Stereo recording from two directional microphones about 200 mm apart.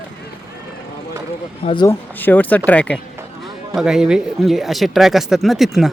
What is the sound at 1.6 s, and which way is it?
Speech, 30° left (ahead or behind).